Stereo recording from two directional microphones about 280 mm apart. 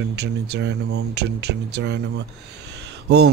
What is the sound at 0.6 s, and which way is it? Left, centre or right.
Speech, right.